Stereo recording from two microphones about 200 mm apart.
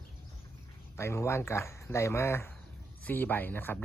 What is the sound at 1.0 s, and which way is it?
Speech, 15° left (ahead or behind).